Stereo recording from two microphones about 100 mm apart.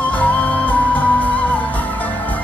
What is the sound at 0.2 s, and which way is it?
Music, 15° left (ahead or behind).